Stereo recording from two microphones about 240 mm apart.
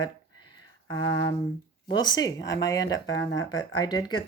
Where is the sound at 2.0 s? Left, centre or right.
Centre.